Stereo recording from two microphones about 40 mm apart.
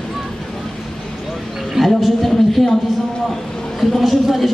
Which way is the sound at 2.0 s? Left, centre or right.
Centre.